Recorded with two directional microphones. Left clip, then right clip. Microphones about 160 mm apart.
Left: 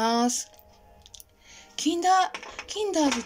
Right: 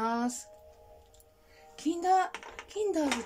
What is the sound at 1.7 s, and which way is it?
A child's voice, 10° right (ahead or behind).